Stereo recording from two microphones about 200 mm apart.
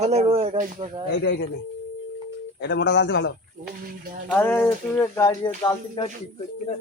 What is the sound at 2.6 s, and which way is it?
Speech, 60° left (ahead or behind).